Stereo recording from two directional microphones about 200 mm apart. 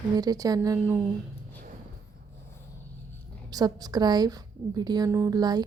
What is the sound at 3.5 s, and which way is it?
A woman's voice, 20° right (ahead or behind).